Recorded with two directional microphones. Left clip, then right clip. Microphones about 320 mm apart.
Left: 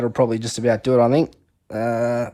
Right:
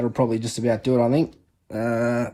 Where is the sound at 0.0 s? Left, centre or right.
Left.